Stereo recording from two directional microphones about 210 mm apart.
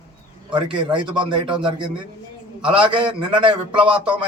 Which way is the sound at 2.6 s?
25° right (ahead or behind).